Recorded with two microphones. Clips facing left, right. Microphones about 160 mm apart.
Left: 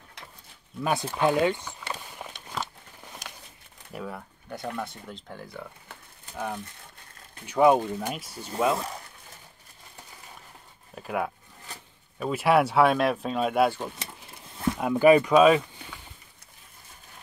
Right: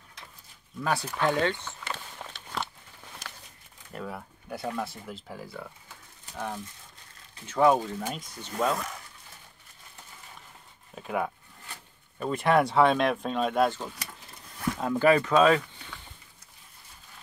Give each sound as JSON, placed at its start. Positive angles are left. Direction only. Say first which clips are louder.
{"t": 0.8, "sound": "speech", "louder": "left 3 dB", "side_deg": 20}
{"t": 2.0, "sound": "biting", "louder": "left 2 dB", "side_deg": 15}
{"t": 3.9, "sound": "speech", "louder": "left 1 dB", "side_deg": 0}
{"t": 11.0, "sound": "speech", "louder": "left 1 dB", "side_deg": 5}
{"t": 13.9, "sound": "vehicle", "louder": "left 2 dB", "side_deg": 25}
{"t": 14.8, "sound": "speech", "louder": "left 4 dB", "side_deg": 10}